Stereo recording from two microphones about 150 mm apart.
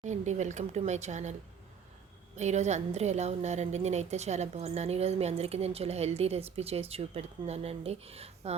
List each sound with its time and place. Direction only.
0.0 s a woman's voice: 50° right (ahead or behind)